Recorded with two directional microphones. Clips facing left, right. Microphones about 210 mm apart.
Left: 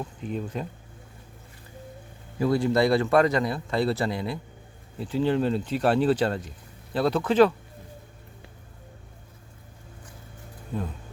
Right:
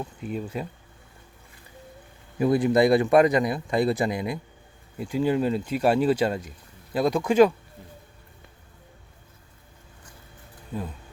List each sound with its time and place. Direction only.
0.0 s a man's voice: 5° right (ahead or behind)
2.4 s a man's voice: 20° right (ahead or behind)